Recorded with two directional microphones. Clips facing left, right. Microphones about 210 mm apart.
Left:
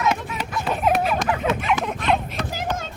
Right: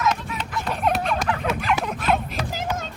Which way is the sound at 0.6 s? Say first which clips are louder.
Left 3 dB; 5° left (ahead or behind).